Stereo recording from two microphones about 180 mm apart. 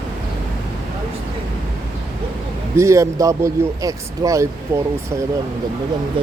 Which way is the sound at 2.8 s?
15° right (ahead or behind).